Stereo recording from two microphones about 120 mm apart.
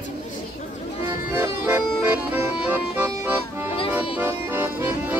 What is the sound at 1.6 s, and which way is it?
Accordion, 15° right (ahead or behind).